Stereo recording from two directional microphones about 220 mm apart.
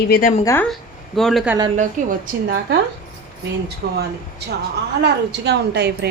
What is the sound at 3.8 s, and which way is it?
A woman's voice, 50° right (ahead or behind).